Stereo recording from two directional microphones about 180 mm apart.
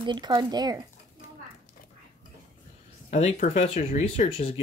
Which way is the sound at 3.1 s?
40° left (ahead or behind).